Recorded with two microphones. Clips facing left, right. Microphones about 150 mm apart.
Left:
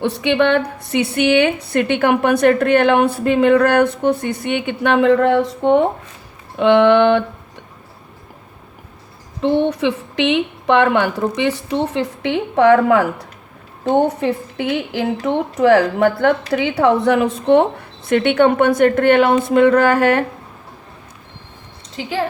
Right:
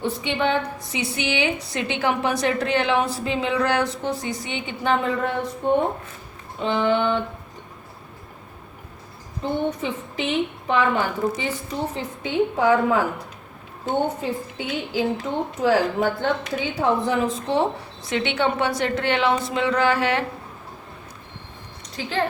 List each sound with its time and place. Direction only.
0.0 s a woman's voice: 70° left (ahead or behind); by 5.8 s 90° left
6.6 s a woman's voice: 70° left (ahead or behind)
9.4 s a woman's voice: 90° left; by 20.2 s 50° left (ahead or behind)
22.0 s speech: 20° left (ahead or behind)